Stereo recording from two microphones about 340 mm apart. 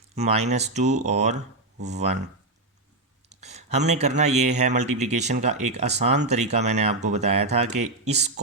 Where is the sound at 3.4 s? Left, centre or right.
Centre.